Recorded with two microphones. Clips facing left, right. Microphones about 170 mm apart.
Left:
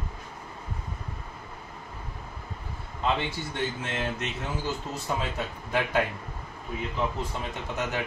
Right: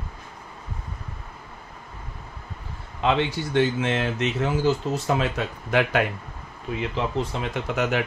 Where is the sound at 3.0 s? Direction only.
90° right.